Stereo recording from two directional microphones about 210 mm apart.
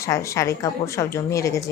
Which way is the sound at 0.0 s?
15° left (ahead or behind).